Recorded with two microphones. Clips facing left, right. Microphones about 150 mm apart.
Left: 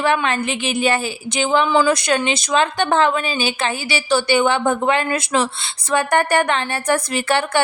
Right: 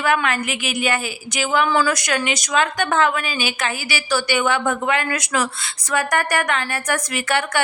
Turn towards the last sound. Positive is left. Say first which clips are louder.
# left 3 dB
turn(degrees=30)  # may be behind; listen again after turning